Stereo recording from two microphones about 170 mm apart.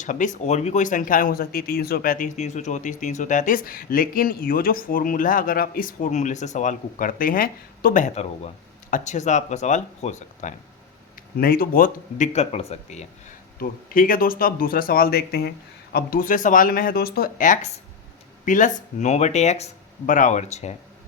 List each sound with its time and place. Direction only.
0.0 s speech: 50° left (ahead or behind)
11.3 s speech: 60° left (ahead or behind); by 13.1 s 40° left (ahead or behind)
13.6 s speech: 55° left (ahead or behind)